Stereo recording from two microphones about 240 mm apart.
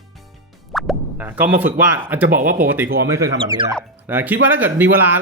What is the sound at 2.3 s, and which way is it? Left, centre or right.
Speech, right.